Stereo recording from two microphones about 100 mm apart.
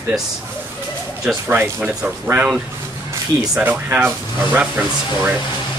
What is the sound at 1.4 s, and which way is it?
Speech, 20° right (ahead or behind).